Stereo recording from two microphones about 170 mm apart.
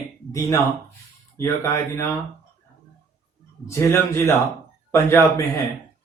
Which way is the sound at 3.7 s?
15° left (ahead or behind).